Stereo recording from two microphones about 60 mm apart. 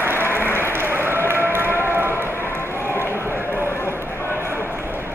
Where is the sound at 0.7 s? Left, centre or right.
Right.